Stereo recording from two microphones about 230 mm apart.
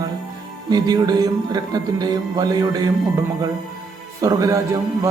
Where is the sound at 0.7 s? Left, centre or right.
Centre.